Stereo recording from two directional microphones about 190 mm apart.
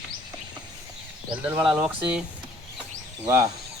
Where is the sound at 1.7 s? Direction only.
5° right (ahead or behind).